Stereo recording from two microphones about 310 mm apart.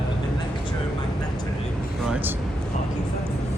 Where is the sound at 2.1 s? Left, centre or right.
Centre.